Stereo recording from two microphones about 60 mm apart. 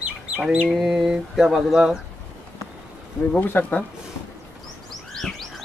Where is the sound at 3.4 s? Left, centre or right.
Left.